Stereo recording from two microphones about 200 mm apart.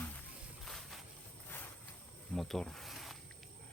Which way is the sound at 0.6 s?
Centre (ahead or behind).